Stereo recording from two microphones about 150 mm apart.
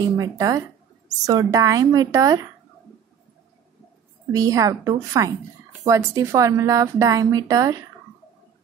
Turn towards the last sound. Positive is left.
turn(degrees=-25)  # may be behind; listen again after turning